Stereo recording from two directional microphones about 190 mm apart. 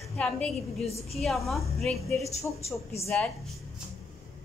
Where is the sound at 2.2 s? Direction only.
35° left (ahead or behind).